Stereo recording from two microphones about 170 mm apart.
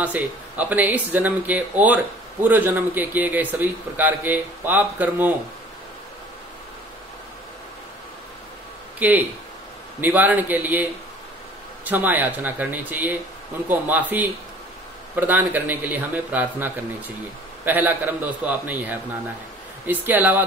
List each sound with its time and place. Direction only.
0.0 s a man's voice: 10° right (ahead or behind)
9.0 s a man's voice: 10° right (ahead or behind)